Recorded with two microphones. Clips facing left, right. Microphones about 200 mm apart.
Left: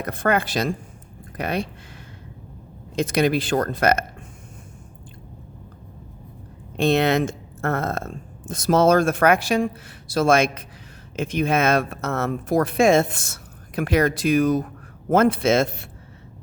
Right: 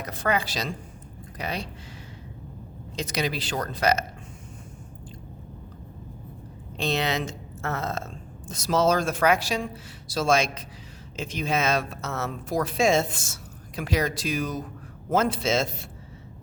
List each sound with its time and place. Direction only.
0.0 s speech: 55° left (ahead or behind)
2.9 s speech: 55° left (ahead or behind)
6.7 s speech: 55° left (ahead or behind)